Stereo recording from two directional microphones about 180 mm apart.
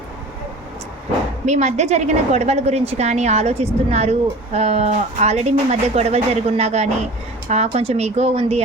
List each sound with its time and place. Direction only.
1.5 s a woman's voice: 40° right (ahead or behind)